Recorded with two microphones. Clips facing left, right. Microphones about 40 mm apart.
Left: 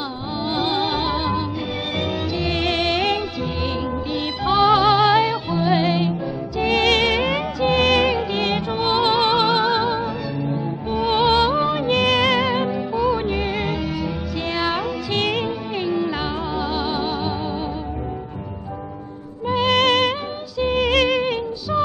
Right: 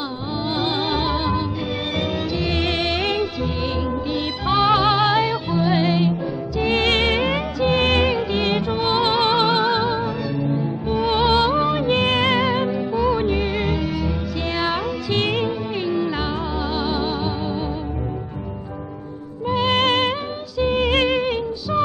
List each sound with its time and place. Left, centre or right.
0.5 s music: centre
4.6 s music: centre
6.7 s music: right
8.1 s music: centre
11.9 s music: right
12.5 s music: centre
19.4 s music: centre
20.9 s music: right
21.2 s music: centre